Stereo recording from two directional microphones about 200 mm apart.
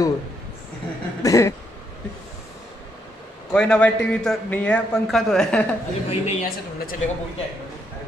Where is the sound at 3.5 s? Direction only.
5° left (ahead or behind).